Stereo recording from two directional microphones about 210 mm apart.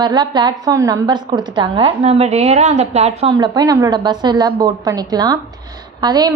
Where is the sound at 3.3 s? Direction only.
20° right (ahead or behind).